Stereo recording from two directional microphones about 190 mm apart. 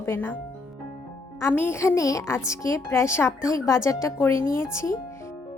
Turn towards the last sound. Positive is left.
turn(degrees=15)  # may be behind; listen again after turning